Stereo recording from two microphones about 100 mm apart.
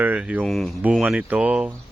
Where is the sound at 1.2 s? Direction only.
15° right (ahead or behind).